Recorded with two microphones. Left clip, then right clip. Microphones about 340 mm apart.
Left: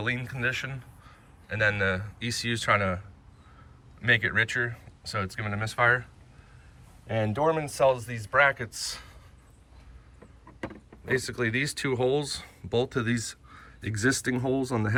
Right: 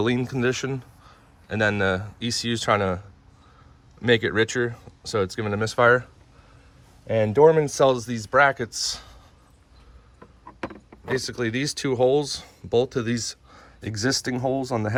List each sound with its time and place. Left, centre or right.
0.0 s a man's voice: centre
4.0 s speech: centre
7.3 s speech: right
7.9 s speech: centre
11.1 s speech: centre